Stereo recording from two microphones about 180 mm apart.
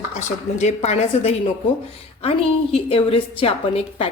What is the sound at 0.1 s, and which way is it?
A woman's voice, 40° left (ahead or behind).